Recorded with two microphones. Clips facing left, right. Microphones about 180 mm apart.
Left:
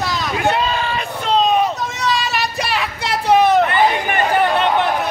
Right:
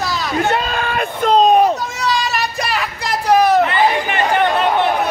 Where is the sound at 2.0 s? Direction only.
Centre (ahead or behind).